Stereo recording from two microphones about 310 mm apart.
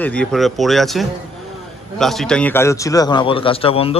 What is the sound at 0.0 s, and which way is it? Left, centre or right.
A man's voice, centre.